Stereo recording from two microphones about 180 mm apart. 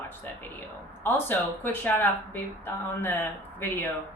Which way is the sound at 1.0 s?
10° left (ahead or behind).